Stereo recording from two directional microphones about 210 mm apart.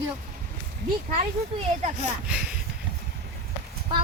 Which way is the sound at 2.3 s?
5° right (ahead or behind).